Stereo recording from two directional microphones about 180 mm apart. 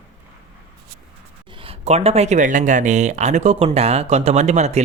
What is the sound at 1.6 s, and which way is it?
Speech, 35° right (ahead or behind).